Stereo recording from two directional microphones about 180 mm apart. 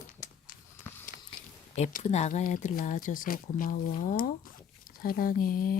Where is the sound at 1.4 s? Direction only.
50° left (ahead or behind).